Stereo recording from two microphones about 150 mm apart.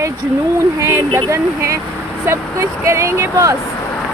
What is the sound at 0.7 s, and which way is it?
Speech, 15° right (ahead or behind).